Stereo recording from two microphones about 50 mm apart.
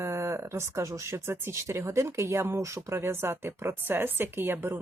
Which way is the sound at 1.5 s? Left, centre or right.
Right.